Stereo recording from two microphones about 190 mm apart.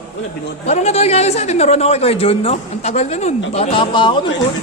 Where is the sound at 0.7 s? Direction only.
35° left (ahead or behind).